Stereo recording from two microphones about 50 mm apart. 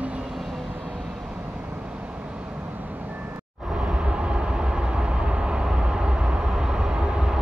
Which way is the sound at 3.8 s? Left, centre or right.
Right.